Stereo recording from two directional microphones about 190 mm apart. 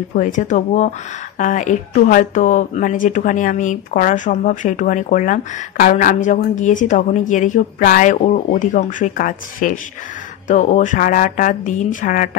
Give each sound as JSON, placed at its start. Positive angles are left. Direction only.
{"t": 0.1, "sound": "a woman's voice", "side_deg": 40}